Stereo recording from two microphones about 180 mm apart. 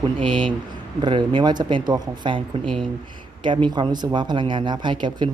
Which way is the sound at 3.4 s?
25° right (ahead or behind).